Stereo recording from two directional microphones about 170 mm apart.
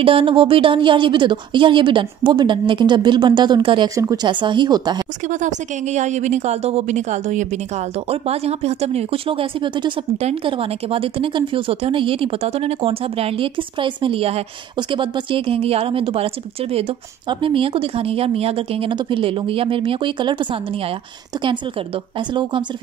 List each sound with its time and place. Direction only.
0.0 s a woman's voice: 30° right (ahead or behind)
5.3 s a woman's voice: 45° right (ahead or behind)
17.3 s a woman's voice: 30° right (ahead or behind)
22.3 s a woman's voice: 30° right (ahead or behind)